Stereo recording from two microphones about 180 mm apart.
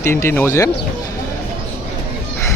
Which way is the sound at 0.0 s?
15° left (ahead or behind).